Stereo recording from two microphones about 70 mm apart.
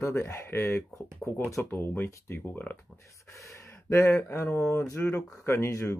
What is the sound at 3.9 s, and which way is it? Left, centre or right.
Speech, left.